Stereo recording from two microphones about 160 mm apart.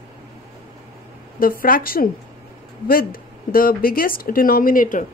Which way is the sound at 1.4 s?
65° left (ahead or behind).